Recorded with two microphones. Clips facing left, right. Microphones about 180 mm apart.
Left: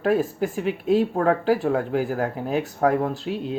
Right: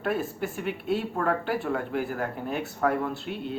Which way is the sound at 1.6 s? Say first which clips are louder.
Left 6 dB; 40° left (ahead or behind).